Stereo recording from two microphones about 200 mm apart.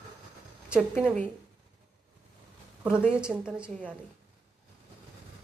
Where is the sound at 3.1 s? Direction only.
5° right (ahead or behind).